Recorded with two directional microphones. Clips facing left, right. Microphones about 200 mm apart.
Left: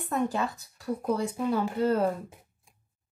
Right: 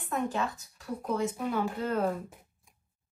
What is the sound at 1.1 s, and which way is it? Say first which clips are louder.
Speech: left 1 dB; 35° left (ahead or behind).